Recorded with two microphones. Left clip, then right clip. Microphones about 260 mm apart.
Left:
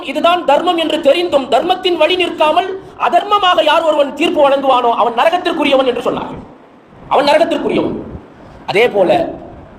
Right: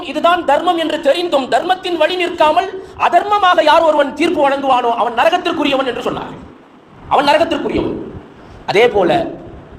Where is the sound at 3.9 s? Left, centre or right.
Right.